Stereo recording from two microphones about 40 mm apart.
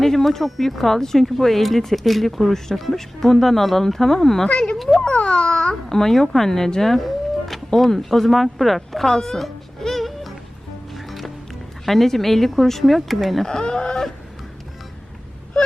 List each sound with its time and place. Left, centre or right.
0.0 s speech: centre
4.4 s a child's voice: left
5.9 s speech: centre
9.0 s speech: centre
9.4 s music: centre
11.9 s speech: centre
13.4 s speech: centre